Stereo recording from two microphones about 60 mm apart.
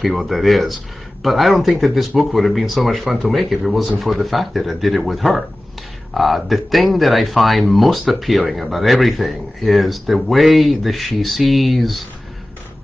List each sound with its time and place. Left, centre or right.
0.0 s speech: centre